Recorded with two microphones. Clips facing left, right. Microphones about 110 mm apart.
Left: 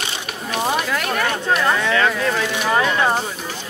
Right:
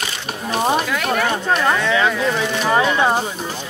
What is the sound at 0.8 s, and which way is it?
Speech, centre (ahead or behind).